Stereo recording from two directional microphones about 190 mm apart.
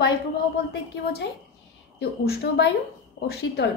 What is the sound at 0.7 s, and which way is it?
A woman's voice, 65° left (ahead or behind).